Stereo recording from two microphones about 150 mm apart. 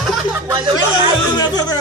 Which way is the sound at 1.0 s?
25° left (ahead or behind).